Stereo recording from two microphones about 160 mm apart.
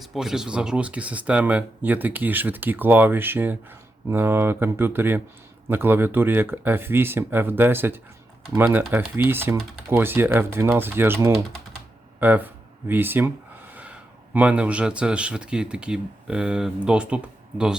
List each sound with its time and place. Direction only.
0.0 s speech: centre (ahead or behind)